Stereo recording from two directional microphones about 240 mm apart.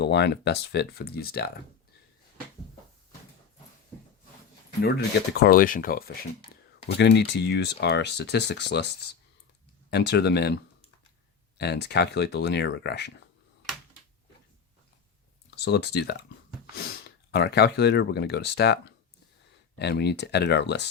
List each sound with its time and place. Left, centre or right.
0.0 s speech: left
4.8 s speech: left
15.4 s speech: left
17.3 s speech: left